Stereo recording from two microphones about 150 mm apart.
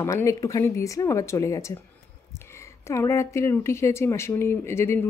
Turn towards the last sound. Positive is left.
turn(degrees=15)  # may be behind; listen again after turning